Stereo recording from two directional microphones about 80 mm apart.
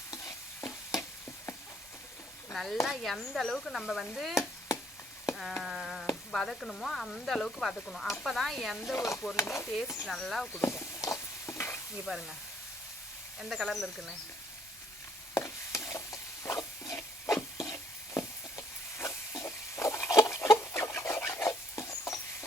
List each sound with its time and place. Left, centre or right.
0.1 s stir: left
2.5 s speech: centre
2.8 s stir: centre
5.6 s stir: centre
6.3 s sizzle: centre
8.0 s stir: centre
9.0 s speech: left
10.1 s stir: centre
10.6 s a sound: left
12.1 s stir: centre
13.4 s stir: centre
15.4 s chopping: left
16.9 s wood: left